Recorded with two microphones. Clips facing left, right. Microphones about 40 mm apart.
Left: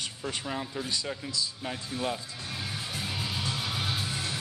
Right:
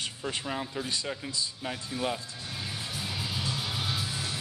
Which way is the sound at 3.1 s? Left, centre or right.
Left.